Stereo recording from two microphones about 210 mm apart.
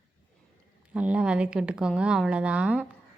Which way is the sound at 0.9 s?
5° right (ahead or behind).